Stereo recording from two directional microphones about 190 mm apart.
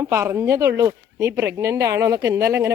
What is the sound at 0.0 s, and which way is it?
Speech, 15° right (ahead or behind).